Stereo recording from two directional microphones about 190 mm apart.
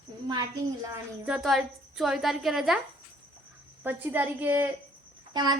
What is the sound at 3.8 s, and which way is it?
Speech, 10° right (ahead or behind).